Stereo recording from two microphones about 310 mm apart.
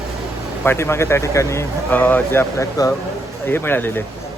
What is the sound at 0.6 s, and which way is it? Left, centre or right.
A man's voice, centre.